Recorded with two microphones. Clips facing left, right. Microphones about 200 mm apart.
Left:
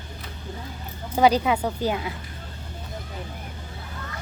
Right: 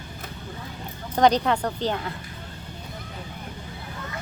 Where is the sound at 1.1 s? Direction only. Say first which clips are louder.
Even; 5° left (ahead or behind).